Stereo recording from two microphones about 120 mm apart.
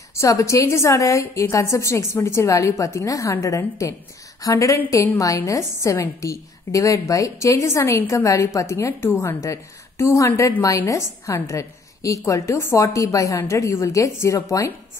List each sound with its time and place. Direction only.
0.1 s a woman's voice: 25° left (ahead or behind)